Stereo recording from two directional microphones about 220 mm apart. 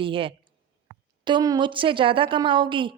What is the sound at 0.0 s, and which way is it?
A woman's voice, 25° right (ahead or behind).